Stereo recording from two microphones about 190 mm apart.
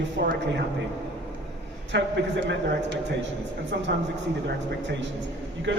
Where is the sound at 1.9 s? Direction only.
70° right (ahead or behind).